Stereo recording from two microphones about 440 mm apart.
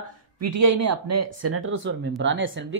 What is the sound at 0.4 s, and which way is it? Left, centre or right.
Speech, right.